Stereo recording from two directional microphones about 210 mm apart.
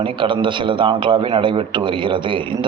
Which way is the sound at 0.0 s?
25° right (ahead or behind).